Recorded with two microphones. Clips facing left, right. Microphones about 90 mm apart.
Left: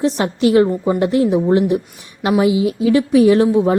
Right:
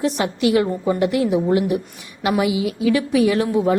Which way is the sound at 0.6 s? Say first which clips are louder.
Left 4 dB; 15° left (ahead or behind).